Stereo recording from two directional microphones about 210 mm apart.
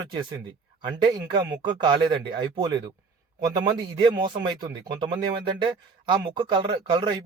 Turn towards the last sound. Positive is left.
turn(degrees=-20)  # may be behind; listen again after turning